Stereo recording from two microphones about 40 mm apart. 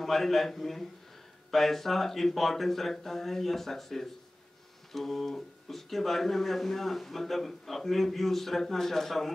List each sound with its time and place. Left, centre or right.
0.0 s speech: centre